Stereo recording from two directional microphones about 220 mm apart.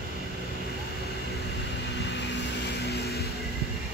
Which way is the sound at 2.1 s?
50° left (ahead or behind).